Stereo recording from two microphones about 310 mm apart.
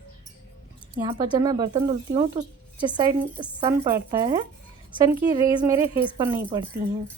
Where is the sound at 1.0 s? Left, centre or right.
Centre.